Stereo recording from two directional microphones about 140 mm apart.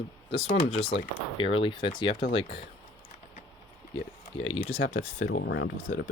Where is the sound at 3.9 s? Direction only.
40° left (ahead or behind).